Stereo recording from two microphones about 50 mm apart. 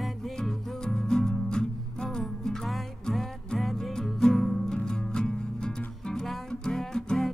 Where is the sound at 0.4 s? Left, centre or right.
Centre.